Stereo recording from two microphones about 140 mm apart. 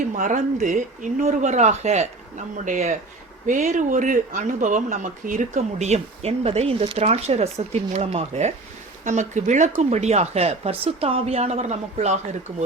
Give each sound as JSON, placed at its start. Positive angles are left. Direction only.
{"t": 0.1, "sound": "speech", "side_deg": -65}